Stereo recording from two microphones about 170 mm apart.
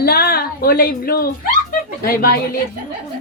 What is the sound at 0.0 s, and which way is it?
Speech, 65° left (ahead or behind).